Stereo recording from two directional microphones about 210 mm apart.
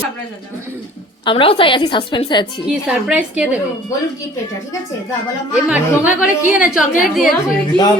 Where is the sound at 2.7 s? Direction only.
5° right (ahead or behind).